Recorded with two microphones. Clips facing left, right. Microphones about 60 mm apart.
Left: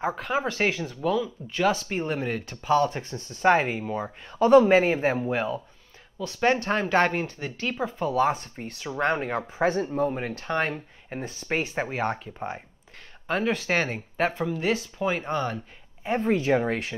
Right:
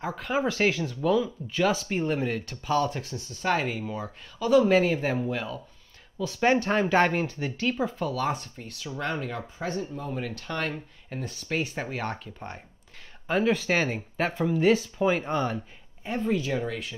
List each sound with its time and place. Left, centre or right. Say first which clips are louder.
0.0 s speech: left 5 dB; centre
0.3 s speech: right 2 dB; centre
3.4 s speech: left 6 dB; left
3.9 s speech: left 4 dB; left
4.6 s speech: left 2 dB; left
6.2 s speech: even; centre
8.1 s speech: left 5 dB; left
8.5 s speech: left 6 dB; left
9.7 s speech: left 6 dB; left
10.0 s speech: left 5 dB; left; by 12.6 s centre
13.3 s speech: right 1 dB; centre
16.2 s speech: left 4 dB; left